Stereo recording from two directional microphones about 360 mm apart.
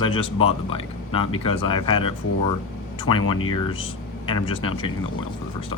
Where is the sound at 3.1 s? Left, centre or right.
Left.